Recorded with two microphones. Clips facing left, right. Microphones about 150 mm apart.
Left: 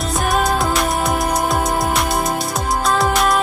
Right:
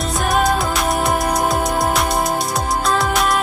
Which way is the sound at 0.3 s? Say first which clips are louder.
Even; centre (ahead or behind).